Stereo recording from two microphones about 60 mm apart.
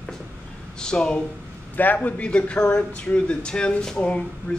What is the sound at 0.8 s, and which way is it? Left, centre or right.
Speech, centre.